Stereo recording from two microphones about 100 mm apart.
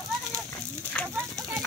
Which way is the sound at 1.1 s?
35° right (ahead or behind).